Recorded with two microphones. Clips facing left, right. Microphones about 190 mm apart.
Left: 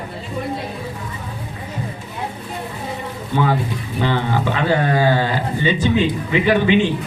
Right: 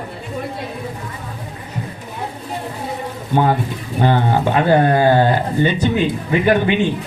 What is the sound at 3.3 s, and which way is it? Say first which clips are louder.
Speech: right 2 dB; 50° right (ahead or behind).